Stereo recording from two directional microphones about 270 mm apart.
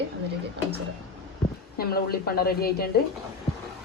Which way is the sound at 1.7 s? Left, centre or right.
Left.